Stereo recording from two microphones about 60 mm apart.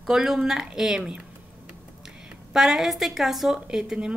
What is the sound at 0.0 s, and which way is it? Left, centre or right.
A woman's voice, centre.